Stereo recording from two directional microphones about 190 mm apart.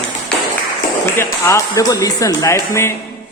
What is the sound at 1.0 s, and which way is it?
A man's voice, 15° left (ahead or behind).